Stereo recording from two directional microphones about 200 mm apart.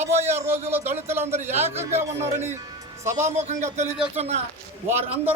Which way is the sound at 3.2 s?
35° right (ahead or behind).